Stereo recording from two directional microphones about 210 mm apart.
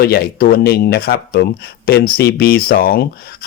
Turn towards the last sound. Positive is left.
turn(degrees=45)  # may be behind; listen again after turning